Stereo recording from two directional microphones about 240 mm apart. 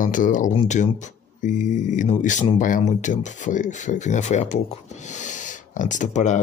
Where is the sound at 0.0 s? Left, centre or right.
Left.